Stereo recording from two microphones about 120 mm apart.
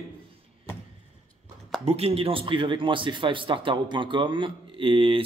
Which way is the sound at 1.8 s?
60° right (ahead or behind).